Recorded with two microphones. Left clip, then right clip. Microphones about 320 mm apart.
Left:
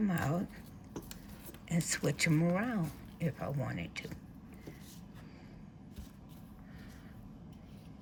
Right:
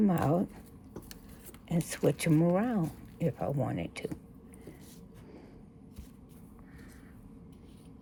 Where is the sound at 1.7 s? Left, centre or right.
Centre.